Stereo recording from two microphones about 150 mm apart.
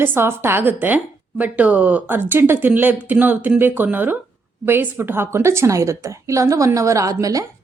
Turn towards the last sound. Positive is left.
turn(degrees=-20)  # may be behind; listen again after turning